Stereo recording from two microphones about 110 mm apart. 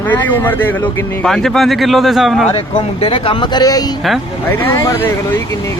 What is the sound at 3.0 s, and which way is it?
Speech, 55° left (ahead or behind).